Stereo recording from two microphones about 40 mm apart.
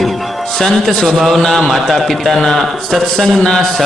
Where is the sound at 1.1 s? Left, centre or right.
Centre.